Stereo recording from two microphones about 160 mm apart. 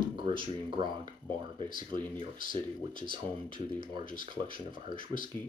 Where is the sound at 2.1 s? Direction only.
60° left (ahead or behind).